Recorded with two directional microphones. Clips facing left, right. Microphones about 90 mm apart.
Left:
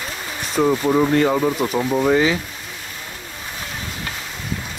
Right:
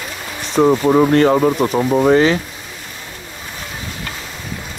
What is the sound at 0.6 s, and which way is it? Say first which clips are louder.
Speech: right 5 dB; 55° right (ahead or behind).